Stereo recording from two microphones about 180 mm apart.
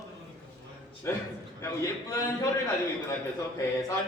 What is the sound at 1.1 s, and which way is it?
Speech, 15° left (ahead or behind).